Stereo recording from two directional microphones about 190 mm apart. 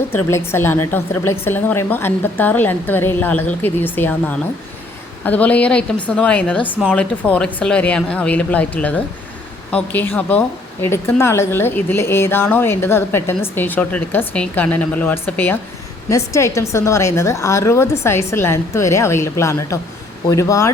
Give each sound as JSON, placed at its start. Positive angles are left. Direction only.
{"t": 0.1, "sound": "a woman's voice", "side_deg": 10}